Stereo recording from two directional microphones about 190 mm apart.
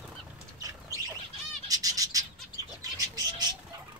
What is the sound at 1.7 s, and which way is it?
Bird, 20° right (ahead or behind).